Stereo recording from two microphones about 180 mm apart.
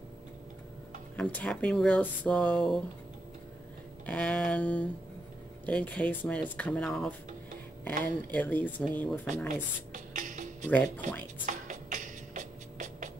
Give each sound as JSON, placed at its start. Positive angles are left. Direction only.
{"t": 1.1, "sound": "speech", "side_deg": 5}
{"t": 4.0, "sound": "speech", "side_deg": 5}
{"t": 9.5, "sound": "music", "side_deg": -45}